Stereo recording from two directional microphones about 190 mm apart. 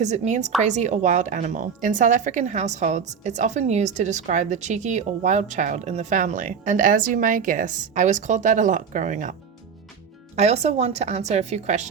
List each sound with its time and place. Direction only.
0.0 s speech: 40° right (ahead or behind)
10.3 s speech: 35° right (ahead or behind)